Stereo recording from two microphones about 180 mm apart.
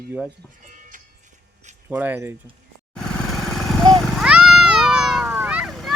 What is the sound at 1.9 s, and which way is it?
Speech, 10° right (ahead or behind).